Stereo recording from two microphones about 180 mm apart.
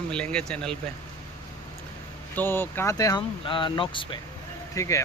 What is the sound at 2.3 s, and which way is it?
Speech, 10° left (ahead or behind).